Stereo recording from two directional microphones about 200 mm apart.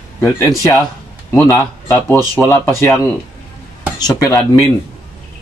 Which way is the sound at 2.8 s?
15° left (ahead or behind).